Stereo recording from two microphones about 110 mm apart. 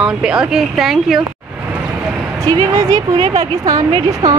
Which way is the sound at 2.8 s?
30° right (ahead or behind).